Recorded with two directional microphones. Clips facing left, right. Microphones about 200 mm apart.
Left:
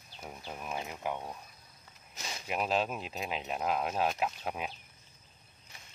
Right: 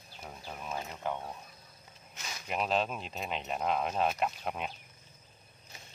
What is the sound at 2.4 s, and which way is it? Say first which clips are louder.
Speech: even; 5° left (ahead or behind).